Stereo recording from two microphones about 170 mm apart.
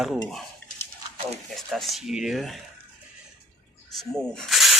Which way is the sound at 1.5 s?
Centre (ahead or behind).